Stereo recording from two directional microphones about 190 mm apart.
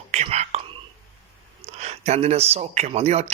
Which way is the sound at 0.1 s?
35° right (ahead or behind).